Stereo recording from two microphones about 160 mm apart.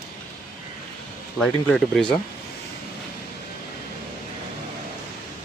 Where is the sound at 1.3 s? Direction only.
5° left (ahead or behind).